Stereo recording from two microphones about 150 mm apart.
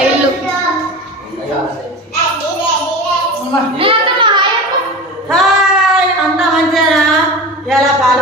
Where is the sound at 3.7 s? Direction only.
35° right (ahead or behind).